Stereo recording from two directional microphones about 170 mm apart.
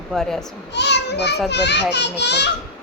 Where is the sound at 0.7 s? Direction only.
90° left.